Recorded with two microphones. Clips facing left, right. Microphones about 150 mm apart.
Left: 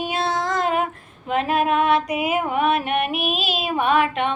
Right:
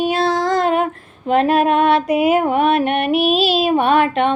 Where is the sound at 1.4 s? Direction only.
70° right (ahead or behind).